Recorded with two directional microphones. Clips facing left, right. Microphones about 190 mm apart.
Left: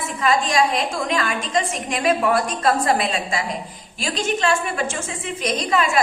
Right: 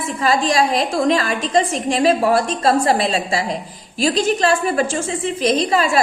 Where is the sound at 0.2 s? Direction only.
35° right (ahead or behind).